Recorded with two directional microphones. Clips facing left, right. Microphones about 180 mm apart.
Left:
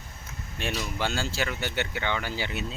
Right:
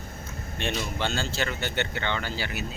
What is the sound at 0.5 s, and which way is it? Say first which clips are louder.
Speech: right 1 dB; 5° left (ahead or behind).